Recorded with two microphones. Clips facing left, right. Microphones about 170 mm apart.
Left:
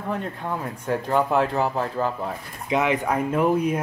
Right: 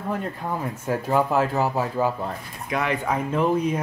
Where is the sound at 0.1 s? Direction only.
5° right (ahead or behind).